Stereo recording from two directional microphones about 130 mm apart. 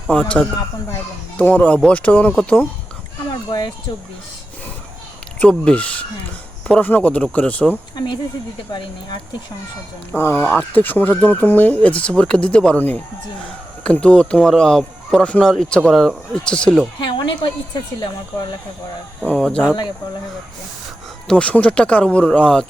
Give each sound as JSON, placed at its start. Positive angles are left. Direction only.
{"t": 0.1, "sound": "speech", "side_deg": 10}
{"t": 5.4, "sound": "speech", "side_deg": 10}
{"t": 7.9, "sound": "speech", "side_deg": 35}
{"t": 10.1, "sound": "speech", "side_deg": 20}
{"t": 10.3, "sound": "speech", "side_deg": 0}
{"t": 10.8, "sound": "speech", "side_deg": 15}
{"t": 17.0, "sound": "a woman's voice", "side_deg": 35}
{"t": 19.2, "sound": "speech", "side_deg": 5}
{"t": 21.2, "sound": "speech", "side_deg": 10}